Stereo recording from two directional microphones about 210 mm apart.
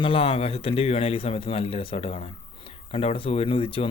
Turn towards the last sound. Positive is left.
turn(degrees=25)  # may be behind; listen again after turning